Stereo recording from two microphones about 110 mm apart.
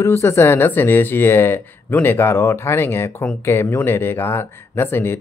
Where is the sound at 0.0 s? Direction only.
25° left (ahead or behind).